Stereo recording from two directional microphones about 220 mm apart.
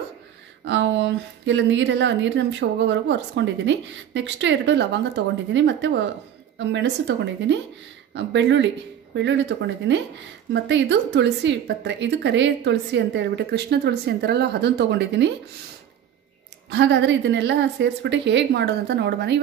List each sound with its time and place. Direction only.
0.7 s a woman's voice: 55° right (ahead or behind)
16.7 s a woman's voice: 55° right (ahead or behind)